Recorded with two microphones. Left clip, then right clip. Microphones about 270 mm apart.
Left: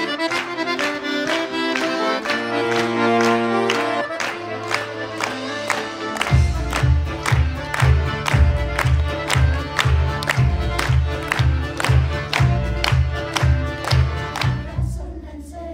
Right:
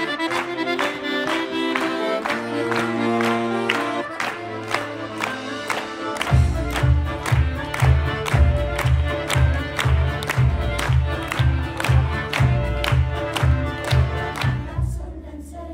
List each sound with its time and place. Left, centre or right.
0.0 s accordion: centre
1.9 s music: centre
2.5 s music: centre